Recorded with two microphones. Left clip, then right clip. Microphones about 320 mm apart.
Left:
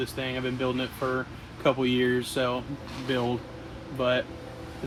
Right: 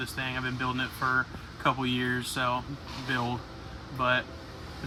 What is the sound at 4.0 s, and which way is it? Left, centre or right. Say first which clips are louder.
Speech: left 1 dB; centre.